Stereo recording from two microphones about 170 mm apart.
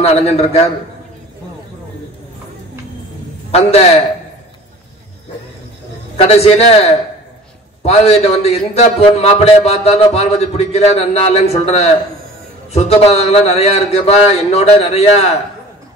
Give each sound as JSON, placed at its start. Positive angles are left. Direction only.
{"t": 0.0, "sound": "a man's voice", "side_deg": 40}
{"t": 3.5, "sound": "a man's voice", "side_deg": 40}
{"t": 6.1, "sound": "a man's voice", "side_deg": 35}